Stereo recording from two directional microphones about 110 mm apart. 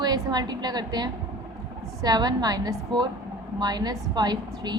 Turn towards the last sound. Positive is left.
turn(degrees=-40)  # may be behind; listen again after turning